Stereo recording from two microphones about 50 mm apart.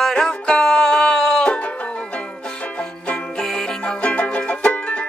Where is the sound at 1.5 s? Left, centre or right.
Left.